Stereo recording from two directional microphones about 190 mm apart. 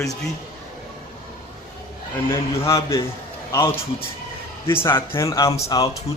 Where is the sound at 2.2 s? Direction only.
15° left (ahead or behind).